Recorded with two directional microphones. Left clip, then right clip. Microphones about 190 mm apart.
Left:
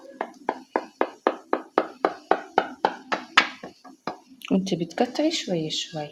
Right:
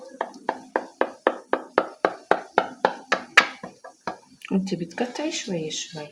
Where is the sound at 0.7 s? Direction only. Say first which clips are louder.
Right 1 dB; 25° left (ahead or behind).